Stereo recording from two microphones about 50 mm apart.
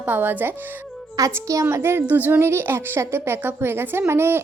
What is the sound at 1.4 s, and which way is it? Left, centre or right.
Speech, right.